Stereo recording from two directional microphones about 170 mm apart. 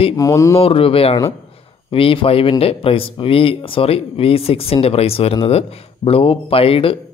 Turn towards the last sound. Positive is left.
turn(degrees=35)  # may be behind; listen again after turning